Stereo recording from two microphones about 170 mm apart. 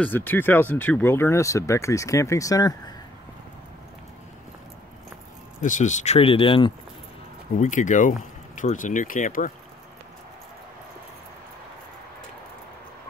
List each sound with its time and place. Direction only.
0.0 s speech: 10° left (ahead or behind)
5.6 s speech: 45° left (ahead or behind); by 6.7 s 30° left (ahead or behind)
7.5 s speech: 45° left (ahead or behind)